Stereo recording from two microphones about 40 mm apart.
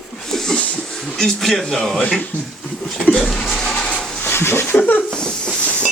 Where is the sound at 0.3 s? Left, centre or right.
Centre.